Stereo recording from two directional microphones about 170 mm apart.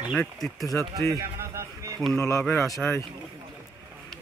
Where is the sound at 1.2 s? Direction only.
20° right (ahead or behind).